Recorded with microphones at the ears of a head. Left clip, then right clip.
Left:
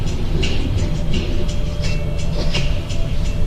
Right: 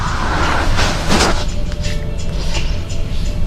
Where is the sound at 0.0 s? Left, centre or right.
Right.